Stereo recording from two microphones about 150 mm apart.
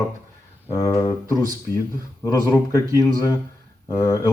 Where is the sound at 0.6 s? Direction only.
20° left (ahead or behind).